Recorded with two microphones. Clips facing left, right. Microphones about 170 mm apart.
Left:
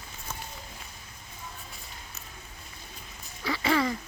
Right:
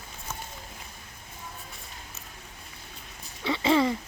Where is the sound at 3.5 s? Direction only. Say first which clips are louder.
Right 3 dB; 25° right (ahead or behind).